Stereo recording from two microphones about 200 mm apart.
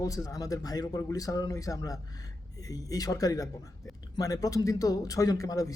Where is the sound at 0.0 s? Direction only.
15° left (ahead or behind).